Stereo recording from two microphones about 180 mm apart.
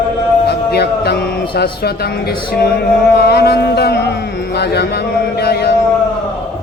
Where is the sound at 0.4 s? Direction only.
65° left (ahead or behind).